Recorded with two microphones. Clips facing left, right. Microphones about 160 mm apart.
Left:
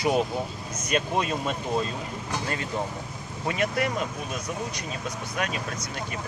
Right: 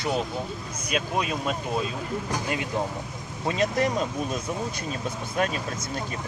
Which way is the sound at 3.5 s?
25° right (ahead or behind).